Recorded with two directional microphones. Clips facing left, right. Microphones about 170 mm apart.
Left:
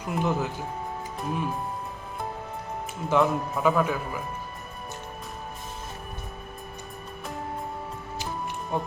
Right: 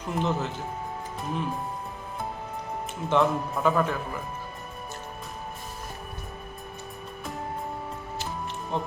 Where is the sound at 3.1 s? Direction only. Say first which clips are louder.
Left 1 dB; 5° left (ahead or behind).